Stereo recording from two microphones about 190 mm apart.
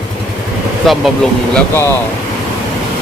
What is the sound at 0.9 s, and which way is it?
Speech, centre (ahead or behind).